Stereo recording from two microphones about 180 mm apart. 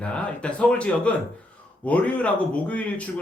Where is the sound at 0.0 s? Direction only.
5° left (ahead or behind).